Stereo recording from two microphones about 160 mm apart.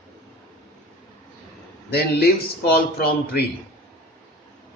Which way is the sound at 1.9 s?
85° left.